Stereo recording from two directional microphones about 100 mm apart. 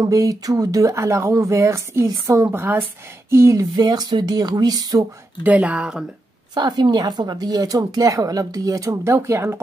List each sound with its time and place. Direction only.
0.0 s speech: 35° right (ahead or behind)
3.7 s speech: 40° right (ahead or behind)
5.4 s speech: 15° right (ahead or behind)
6.5 s speech: 45° right (ahead or behind); by 9.6 s 25° right (ahead or behind)